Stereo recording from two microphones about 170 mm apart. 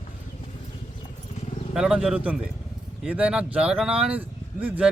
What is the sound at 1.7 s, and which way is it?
A man's voice, 5° right (ahead or behind).